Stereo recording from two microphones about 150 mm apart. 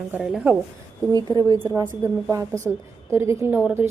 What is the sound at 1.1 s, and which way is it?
Speech, 25° right (ahead or behind).